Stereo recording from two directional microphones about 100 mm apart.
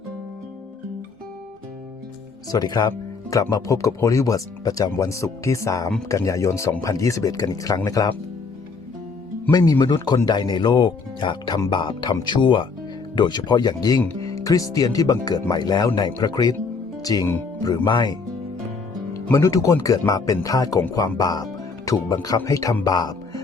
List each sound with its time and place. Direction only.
2.5 s speech: 40° left (ahead or behind)
9.5 s speech: 40° left (ahead or behind)
17.8 s speech: 50° left (ahead or behind)
19.3 s speech: 35° left (ahead or behind)